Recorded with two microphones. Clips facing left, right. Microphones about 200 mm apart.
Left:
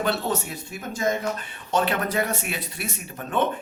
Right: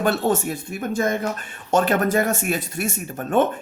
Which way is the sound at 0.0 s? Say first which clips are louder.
Right 5 dB; 50° right (ahead or behind).